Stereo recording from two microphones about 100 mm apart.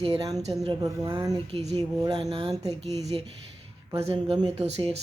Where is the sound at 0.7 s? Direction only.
45° right (ahead or behind).